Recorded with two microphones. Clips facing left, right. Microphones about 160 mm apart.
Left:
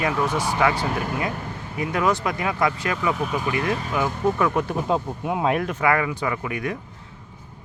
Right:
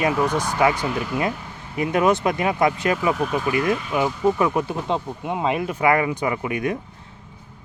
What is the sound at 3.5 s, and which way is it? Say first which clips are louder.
Speech: right 4 dB; 30° left (ahead or behind).